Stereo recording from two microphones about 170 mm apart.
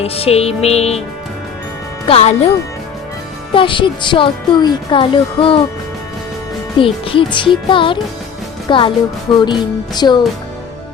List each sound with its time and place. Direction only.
0.0 s music: 35° left (ahead or behind)
2.0 s music: 35° left (ahead or behind)
3.5 s speech: 30° left (ahead or behind)
6.7 s music: 30° left (ahead or behind)
7.3 s speech: 30° left (ahead or behind)